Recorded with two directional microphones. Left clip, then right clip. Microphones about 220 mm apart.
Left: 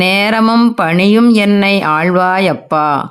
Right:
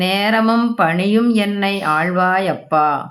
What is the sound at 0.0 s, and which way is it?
Speech, 40° left (ahead or behind).